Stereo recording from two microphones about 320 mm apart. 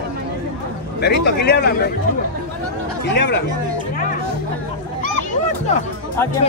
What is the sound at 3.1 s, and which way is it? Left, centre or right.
Speech, left.